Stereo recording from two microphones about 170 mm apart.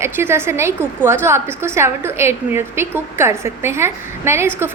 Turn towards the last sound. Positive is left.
turn(degrees=-15)  # may be behind; listen again after turning